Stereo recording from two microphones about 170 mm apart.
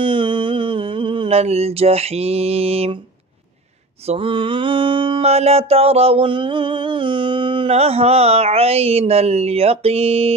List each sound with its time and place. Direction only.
0.0 s mantra: 30° right (ahead or behind)
4.0 s mantra: 35° right (ahead or behind)